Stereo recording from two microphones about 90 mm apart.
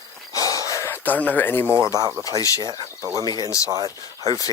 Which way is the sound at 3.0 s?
40° right (ahead or behind).